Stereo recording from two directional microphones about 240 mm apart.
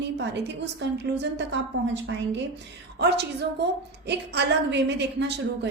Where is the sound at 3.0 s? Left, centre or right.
Right.